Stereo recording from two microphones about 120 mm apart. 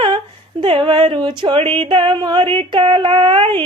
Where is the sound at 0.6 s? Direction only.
50° right (ahead or behind).